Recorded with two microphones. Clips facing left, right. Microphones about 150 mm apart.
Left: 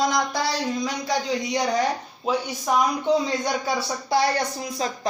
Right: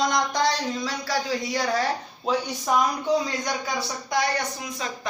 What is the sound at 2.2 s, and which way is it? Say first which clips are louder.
Speech: left 1 dB; 10° left (ahead or behind).